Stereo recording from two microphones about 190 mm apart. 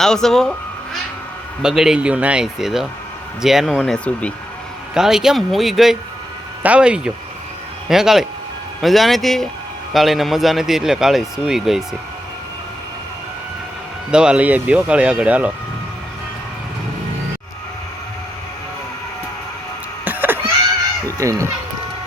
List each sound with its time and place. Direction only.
0.0 s speech: centre (ahead or behind)
1.6 s speech: 5° right (ahead or behind)
14.1 s speech: 5° right (ahead or behind)
20.1 s a sound: 10° right (ahead or behind)
21.2 s speech: 15° right (ahead or behind)